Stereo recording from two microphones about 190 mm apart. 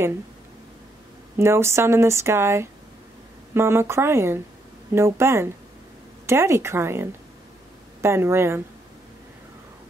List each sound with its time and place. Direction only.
1.4 s speech: 15° right (ahead or behind)